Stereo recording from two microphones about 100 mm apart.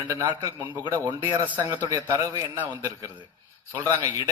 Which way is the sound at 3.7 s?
35° right (ahead or behind).